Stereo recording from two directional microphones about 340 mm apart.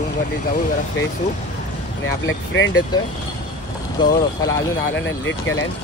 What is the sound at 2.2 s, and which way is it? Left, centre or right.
Speech, left.